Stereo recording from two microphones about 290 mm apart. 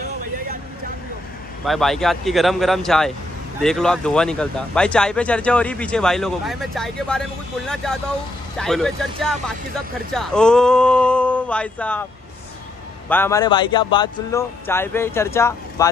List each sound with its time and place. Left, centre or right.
0.0 s vehicle: right
1.6 s speech: centre
13.1 s speech: centre